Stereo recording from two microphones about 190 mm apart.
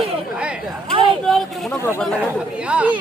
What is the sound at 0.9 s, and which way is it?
Speech, 25° right (ahead or behind).